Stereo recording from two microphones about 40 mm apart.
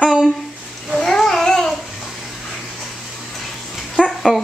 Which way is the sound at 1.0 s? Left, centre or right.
Centre.